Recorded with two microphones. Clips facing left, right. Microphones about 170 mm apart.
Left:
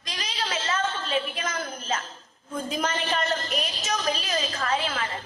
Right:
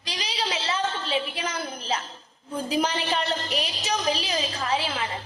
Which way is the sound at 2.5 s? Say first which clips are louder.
Right 3 dB; 35° right (ahead or behind).